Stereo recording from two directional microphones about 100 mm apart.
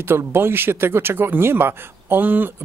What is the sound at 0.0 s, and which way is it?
Speech, 25° right (ahead or behind).